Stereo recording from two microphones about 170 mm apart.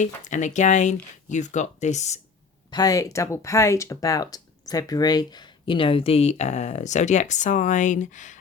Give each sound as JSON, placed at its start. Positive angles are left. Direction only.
{"t": 0.0, "sound": "speech", "side_deg": 45}
{"t": 2.6, "sound": "speech", "side_deg": 20}